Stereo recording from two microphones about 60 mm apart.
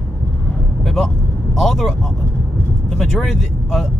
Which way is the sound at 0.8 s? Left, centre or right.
Centre.